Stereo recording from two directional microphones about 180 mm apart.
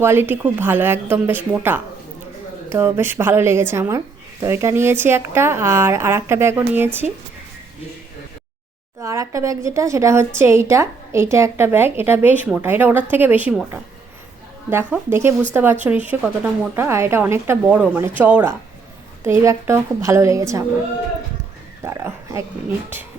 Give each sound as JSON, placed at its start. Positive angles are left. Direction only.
{"t": 0.0, "sound": "a woman's voice", "side_deg": -15}
{"t": 9.0, "sound": "a woman's voice", "side_deg": -15}
{"t": 21.8, "sound": "speech", "side_deg": -15}